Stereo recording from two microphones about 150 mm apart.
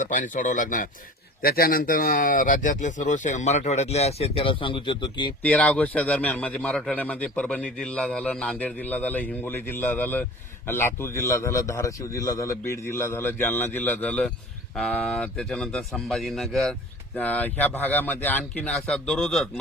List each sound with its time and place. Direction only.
0.1 s speech: 60° left (ahead or behind)
1.4 s speech: 80° left; by 5.3 s 30° left (ahead or behind)
5.4 s a man's voice: 10° left (ahead or behind)